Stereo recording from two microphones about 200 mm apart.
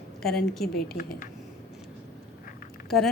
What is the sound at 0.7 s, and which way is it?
Speech, 50° left (ahead or behind).